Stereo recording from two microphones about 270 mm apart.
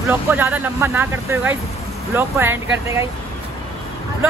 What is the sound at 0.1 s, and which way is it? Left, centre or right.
Speech, centre.